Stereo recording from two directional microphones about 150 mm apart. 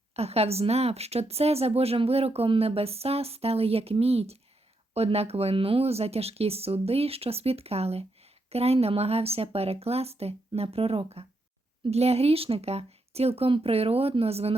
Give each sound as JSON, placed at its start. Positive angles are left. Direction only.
{"t": 0.1, "sound": "speech", "side_deg": -45}